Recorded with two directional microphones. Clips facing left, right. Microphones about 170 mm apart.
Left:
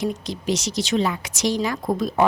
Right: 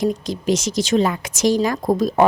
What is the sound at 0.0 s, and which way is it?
Speech, 45° right (ahead or behind).